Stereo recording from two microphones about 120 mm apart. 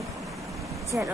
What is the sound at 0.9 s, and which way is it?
Speech, 20° right (ahead or behind).